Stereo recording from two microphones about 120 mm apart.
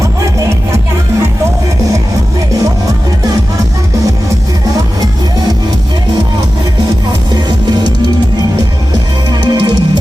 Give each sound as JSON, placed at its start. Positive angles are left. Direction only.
{"t": 9.5, "sound": "music", "side_deg": -35}